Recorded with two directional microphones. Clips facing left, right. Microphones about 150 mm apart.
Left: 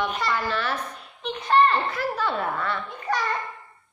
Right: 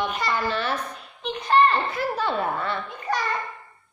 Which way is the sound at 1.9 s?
20° right (ahead or behind).